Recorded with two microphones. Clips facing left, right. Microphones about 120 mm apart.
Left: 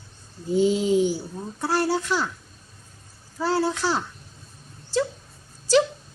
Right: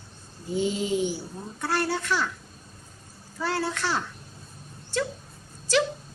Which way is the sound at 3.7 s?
35° left (ahead or behind).